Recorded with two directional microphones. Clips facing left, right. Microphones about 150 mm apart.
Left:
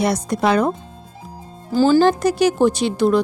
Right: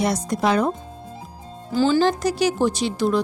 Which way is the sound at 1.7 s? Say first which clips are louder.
Left 4 dB; 40° left (ahead or behind).